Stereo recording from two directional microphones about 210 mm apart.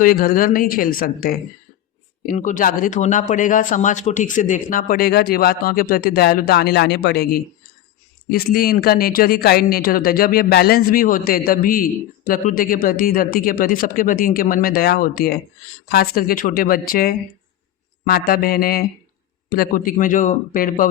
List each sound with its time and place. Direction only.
0.0 s a man's voice: 45° left (ahead or behind)